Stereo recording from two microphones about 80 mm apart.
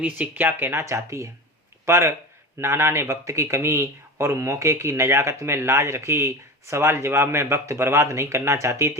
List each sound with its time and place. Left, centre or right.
0.0 s speech: right